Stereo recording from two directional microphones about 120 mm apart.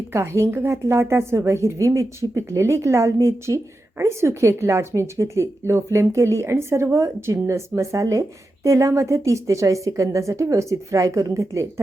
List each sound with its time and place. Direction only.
0.1 s a woman's voice: 20° right (ahead or behind)